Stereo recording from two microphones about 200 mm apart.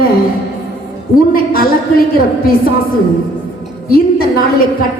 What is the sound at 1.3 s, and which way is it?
Speech, 45° left (ahead or behind).